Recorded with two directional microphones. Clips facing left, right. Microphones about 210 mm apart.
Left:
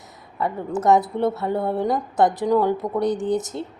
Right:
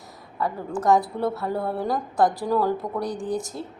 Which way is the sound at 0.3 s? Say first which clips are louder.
Left 3 dB; 20° left (ahead or behind).